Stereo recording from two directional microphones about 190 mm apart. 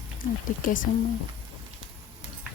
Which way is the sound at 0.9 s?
45° left (ahead or behind).